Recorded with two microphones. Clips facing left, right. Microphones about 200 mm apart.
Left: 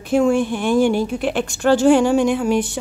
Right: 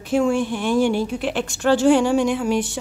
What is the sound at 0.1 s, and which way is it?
A woman's voice, 50° left (ahead or behind).